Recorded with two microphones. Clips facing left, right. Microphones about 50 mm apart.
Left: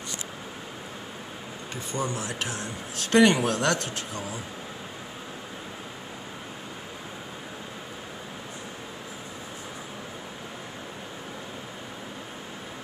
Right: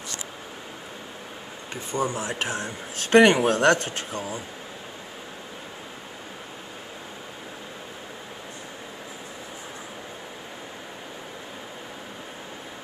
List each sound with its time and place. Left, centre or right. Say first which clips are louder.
1.9 s speech: right 4 dB; right